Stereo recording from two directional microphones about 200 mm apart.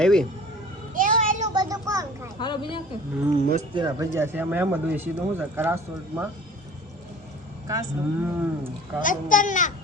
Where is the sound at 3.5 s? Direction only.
25° right (ahead or behind).